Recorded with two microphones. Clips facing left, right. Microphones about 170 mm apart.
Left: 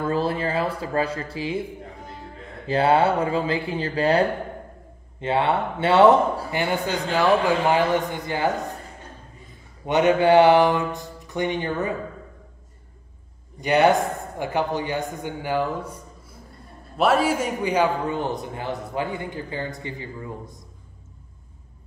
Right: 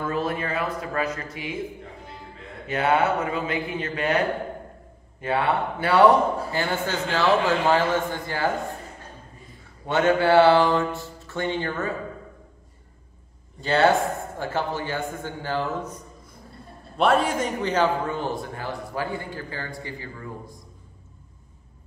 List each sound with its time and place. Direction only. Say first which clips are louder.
0.0 s speech: left 3 dB; 30° left (ahead or behind)
2.6 s speech: left 3 dB; 30° left (ahead or behind)
5.2 s a man's voice: left 2 dB; 25° left (ahead or behind)
9.8 s a man's voice: left 2 dB; 20° left (ahead or behind)
13.6 s a man's voice: left 2 dB; 15° left (ahead or behind)